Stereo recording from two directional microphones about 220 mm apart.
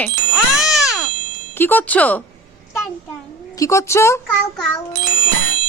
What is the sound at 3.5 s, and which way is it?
Speech, 15° left (ahead or behind).